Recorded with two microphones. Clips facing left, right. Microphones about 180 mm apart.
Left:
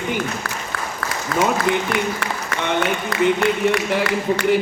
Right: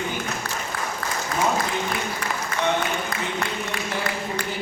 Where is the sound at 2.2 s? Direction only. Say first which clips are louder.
Left 1 dB; 80° left.